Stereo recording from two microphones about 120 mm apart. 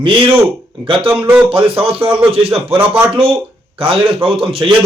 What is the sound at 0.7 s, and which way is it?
Speech, 45° right (ahead or behind).